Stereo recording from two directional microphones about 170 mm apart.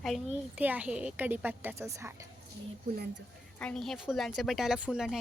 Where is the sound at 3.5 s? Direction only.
5° left (ahead or behind).